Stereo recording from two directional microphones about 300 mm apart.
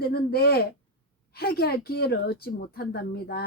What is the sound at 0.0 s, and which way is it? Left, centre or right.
A woman's voice, left.